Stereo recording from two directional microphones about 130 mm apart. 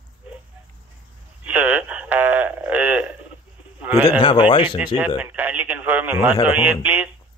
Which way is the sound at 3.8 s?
10° right (ahead or behind).